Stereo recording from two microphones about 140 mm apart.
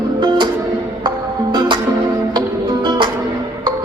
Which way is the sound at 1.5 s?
30° right (ahead or behind).